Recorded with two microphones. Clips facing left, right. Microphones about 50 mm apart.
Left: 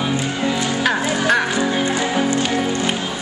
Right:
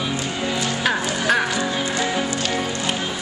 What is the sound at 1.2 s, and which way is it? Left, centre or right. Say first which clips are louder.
Music: left 2 dB; centre.